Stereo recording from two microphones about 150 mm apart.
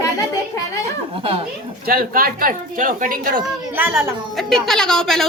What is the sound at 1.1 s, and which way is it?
Speech, 40° right (ahead or behind).